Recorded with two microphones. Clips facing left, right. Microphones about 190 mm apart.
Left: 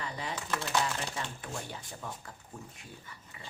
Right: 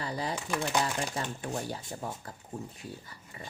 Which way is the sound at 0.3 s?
15° right (ahead or behind).